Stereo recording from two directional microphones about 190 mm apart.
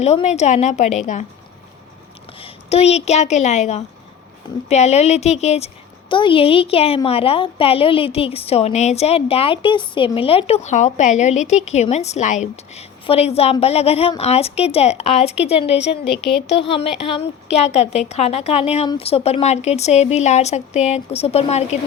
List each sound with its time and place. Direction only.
0.0 s a woman's voice: 35° left (ahead or behind)
2.4 s a woman's voice: 35° left (ahead or behind)
16.0 s speech: 65° left (ahead or behind)
16.5 s a woman's voice: 30° left (ahead or behind)